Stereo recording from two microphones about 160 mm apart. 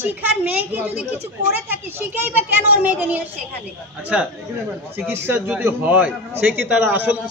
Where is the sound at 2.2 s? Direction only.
10° right (ahead or behind).